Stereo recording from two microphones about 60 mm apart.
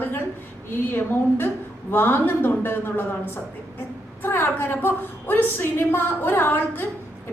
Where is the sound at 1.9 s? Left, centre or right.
Left.